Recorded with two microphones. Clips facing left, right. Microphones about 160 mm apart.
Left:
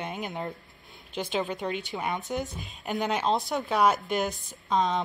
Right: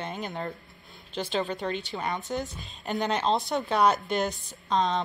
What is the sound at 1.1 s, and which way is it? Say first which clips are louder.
Speech: even; 15° left (ahead or behind).